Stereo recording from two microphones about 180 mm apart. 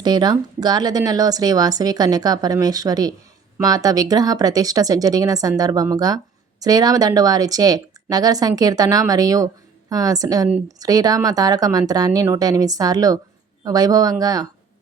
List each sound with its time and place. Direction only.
0.0 s a woman's voice: 25° right (ahead or behind)